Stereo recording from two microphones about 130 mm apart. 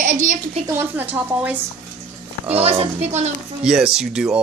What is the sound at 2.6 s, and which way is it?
Speech, 50° right (ahead or behind).